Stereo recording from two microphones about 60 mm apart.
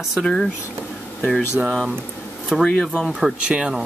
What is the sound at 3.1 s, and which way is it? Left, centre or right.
Speech, centre.